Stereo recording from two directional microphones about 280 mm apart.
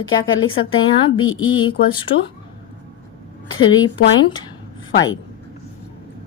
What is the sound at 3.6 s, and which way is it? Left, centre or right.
Speech, left.